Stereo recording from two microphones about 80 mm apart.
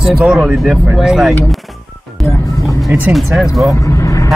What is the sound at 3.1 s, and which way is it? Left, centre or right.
Speech, centre.